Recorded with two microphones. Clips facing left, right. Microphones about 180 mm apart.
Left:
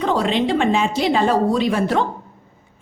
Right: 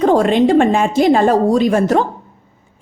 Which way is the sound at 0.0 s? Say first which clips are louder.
Right 7 dB; 45° right (ahead or behind).